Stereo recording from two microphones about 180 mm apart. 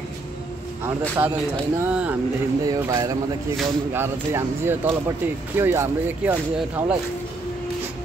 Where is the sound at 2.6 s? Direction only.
20° right (ahead or behind).